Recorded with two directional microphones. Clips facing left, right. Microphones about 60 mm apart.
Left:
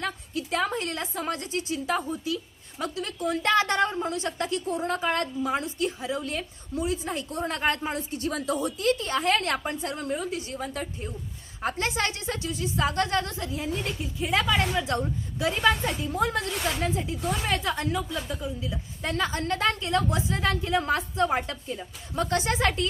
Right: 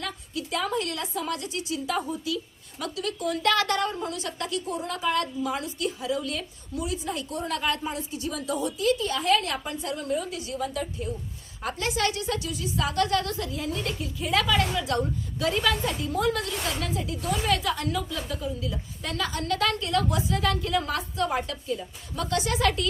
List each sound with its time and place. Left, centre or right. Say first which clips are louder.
0.0 s a woman's voice: left 2 dB; left
18.3 s a woman's voice: right 1 dB; centre
18.6 s a woman's voice: left 1 dB; left